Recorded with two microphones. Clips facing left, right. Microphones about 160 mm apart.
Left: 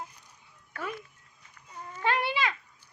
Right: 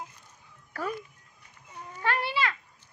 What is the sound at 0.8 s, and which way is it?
Cat, 40° right (ahead or behind).